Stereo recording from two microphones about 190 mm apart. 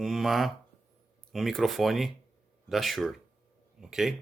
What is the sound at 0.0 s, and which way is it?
Speech, centre (ahead or behind).